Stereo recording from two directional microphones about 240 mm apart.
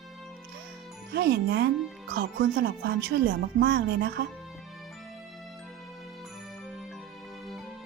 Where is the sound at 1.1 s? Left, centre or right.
Right.